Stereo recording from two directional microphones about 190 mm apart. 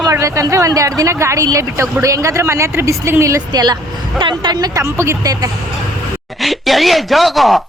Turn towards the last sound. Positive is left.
turn(degrees=0)  # may be behind; listen again after turning